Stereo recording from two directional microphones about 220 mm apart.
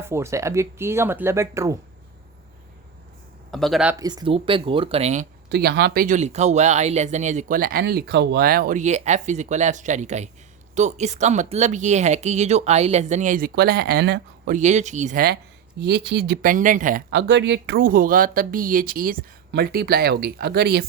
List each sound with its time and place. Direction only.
0.0 s speech: 10° right (ahead or behind)
3.5 s speech: centre (ahead or behind)
3.9 s speech: 20° right (ahead or behind)
5.5 s speech: 50° right (ahead or behind)
17.1 s speech: 55° right (ahead or behind)